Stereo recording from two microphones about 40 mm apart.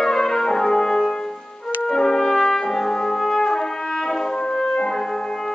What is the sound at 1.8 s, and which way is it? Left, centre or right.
Brass instrument, centre.